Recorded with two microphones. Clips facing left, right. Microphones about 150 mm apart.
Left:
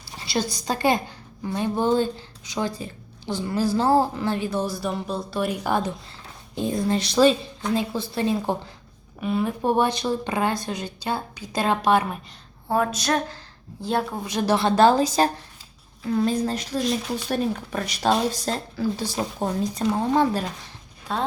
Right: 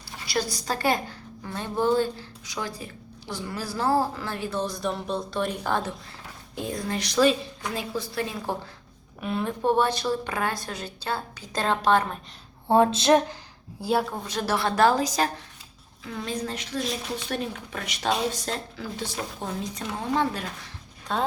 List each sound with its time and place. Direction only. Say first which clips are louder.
0.5 s a woman's voice: left 5 dB; 20° left (ahead or behind)
6.6 s a woman's voice: left 6 dB; 25° left (ahead or behind)
9.2 s a woman's voice: left 2 dB; 5° left (ahead or behind)
12.6 s a woman's voice: right 4 dB; 25° right (ahead or behind)
13.8 s a woman's voice: even; 5° right (ahead or behind)
14.2 s a woman's voice: left 5 dB; 15° left (ahead or behind)
16.0 s speech: left 9 dB; 40° left (ahead or behind)
21.1 s a woman's voice: even; centre (ahead or behind)